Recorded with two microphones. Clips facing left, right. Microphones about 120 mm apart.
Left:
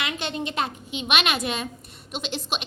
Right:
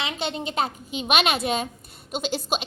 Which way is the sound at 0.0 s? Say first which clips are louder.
Right 1 dB; 30° right (ahead or behind).